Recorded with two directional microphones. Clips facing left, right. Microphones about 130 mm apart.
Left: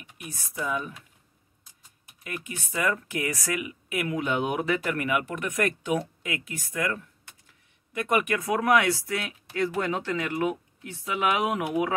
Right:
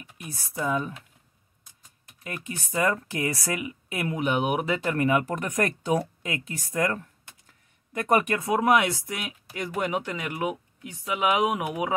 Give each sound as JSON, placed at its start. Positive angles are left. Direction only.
{"t": 0.2, "sound": "speech", "side_deg": -35}
{"t": 2.2, "sound": "speech", "side_deg": -35}
{"t": 8.4, "sound": "speech", "side_deg": -25}